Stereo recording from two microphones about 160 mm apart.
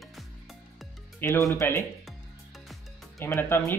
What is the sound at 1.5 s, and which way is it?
Speech, 15° left (ahead or behind).